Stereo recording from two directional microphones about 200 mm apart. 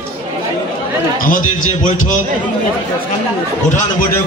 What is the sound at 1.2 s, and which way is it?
Speech, 40° left (ahead or behind).